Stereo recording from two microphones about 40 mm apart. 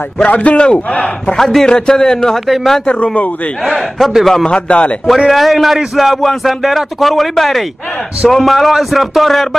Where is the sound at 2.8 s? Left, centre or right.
Left.